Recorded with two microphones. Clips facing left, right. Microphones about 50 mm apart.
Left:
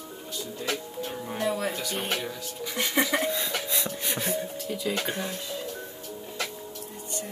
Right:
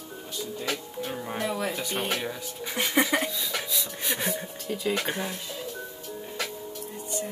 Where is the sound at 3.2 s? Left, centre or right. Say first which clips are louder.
Left 3 dB; left.